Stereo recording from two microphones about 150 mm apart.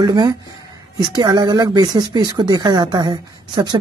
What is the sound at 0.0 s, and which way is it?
A woman's voice, 25° right (ahead or behind).